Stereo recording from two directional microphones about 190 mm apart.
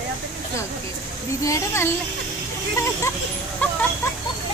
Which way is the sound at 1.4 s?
15° left (ahead or behind).